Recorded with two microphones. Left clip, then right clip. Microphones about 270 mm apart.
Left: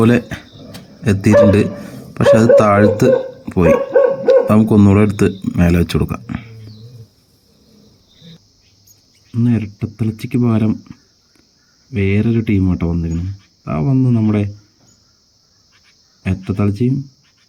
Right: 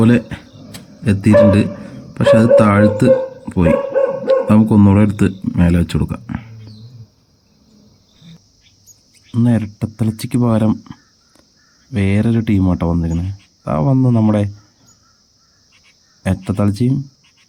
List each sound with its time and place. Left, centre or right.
0.0 s speech: centre
9.3 s speech: centre
16.2 s speech: centre